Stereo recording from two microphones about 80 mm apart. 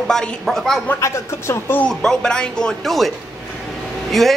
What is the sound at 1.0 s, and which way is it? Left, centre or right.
Speech, left.